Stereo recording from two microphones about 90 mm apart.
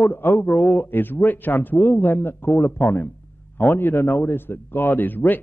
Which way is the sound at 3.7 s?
25° left (ahead or behind).